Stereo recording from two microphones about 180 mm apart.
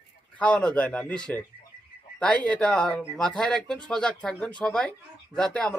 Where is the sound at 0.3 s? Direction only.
5° left (ahead or behind).